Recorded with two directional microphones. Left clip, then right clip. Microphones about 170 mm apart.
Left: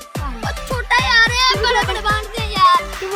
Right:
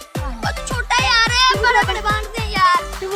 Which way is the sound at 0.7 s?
25° right (ahead or behind).